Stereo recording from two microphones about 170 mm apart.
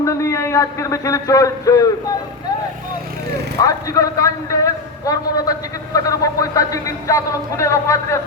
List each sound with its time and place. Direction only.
0.0 s a man's voice: 15° left (ahead or behind)
3.6 s a man's voice: 20° left (ahead or behind)